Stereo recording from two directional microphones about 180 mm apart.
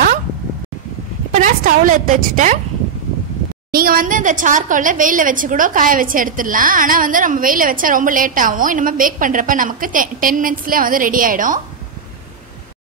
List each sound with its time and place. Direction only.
1.3 s a woman's voice: 45° right (ahead or behind)
3.7 s a woman's voice: 55° right (ahead or behind)